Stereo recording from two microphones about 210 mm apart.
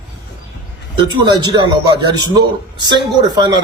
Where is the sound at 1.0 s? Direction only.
20° right (ahead or behind).